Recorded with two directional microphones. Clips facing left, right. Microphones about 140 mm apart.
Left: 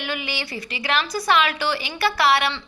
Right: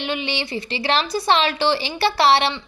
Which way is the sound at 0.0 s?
25° right (ahead or behind).